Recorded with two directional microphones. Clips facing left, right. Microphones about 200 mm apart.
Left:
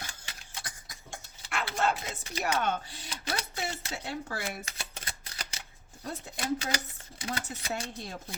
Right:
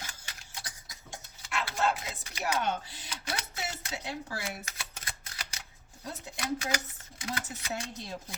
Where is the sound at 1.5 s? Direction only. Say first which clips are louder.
Even; 55° left (ahead or behind).